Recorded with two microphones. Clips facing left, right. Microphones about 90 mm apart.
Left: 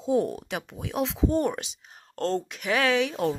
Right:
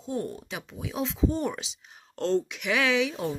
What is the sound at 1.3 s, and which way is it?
Speech, 50° left (ahead or behind).